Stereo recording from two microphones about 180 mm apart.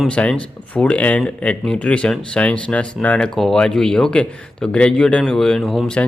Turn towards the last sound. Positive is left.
turn(degrees=5)  # may be behind; listen again after turning